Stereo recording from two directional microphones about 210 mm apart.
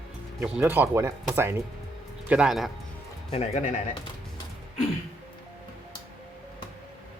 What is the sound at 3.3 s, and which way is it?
Speech, 30° left (ahead or behind).